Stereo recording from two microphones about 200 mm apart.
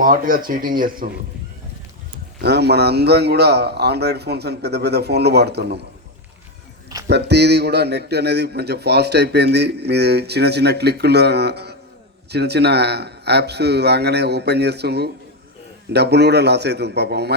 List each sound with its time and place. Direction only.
0.0 s speech: 45° right (ahead or behind)
2.4 s speech: 55° right (ahead or behind)
7.1 s speech: 55° right (ahead or behind)